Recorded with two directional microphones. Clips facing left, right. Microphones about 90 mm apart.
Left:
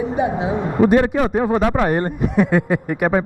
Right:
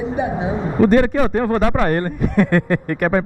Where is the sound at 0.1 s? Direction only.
20° left (ahead or behind).